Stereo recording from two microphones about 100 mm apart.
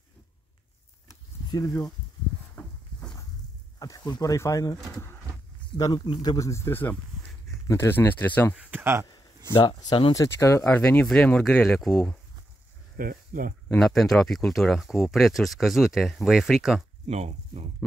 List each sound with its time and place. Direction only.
1.5 s speech: 35° left (ahead or behind)
2.5 s a sound: 5° left (ahead or behind)
3.8 s speech: 40° left (ahead or behind)
5.8 s speech: 35° left (ahead or behind)
8.1 s speech: 20° left (ahead or behind)
8.5 s a sound: 15° right (ahead or behind)
9.5 s speech: 50° left (ahead or behind)
10.1 s speech: 30° left (ahead or behind)
10.6 s speech: 15° left (ahead or behind)
13.7 s speech: 5° left (ahead or behind)
17.1 s speech: 90° right